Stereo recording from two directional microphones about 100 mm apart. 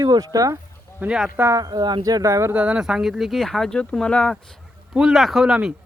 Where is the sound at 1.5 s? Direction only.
40° right (ahead or behind).